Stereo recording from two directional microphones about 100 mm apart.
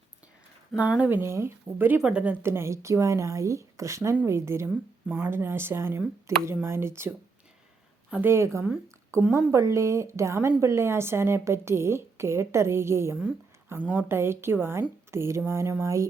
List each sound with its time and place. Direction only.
0.8 s speech: 10° right (ahead or behind)
1.2 s a woman's voice: 25° right (ahead or behind)
2.0 s a woman's voice: 10° right (ahead or behind); by 4.7 s 25° right (ahead or behind)
5.0 s a woman's voice: 15° right (ahead or behind)
8.1 s a woman's voice: 25° right (ahead or behind)